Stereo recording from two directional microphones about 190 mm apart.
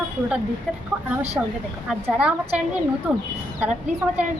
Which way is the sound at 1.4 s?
10° right (ahead or behind).